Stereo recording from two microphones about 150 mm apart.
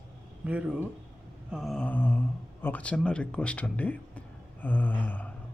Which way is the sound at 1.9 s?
10° left (ahead or behind).